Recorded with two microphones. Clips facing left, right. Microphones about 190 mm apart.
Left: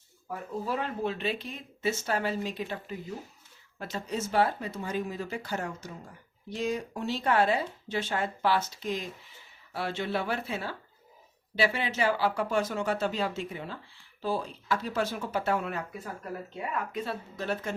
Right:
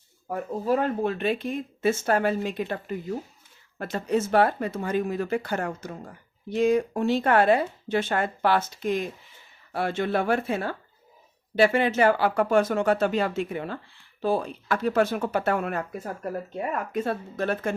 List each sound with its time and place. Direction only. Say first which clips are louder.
0.3 s speech: right 8 dB; 45° right (ahead or behind)